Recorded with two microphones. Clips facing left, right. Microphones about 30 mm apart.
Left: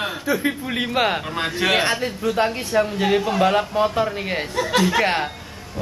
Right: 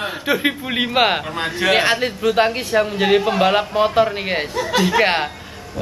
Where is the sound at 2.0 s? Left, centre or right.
Right.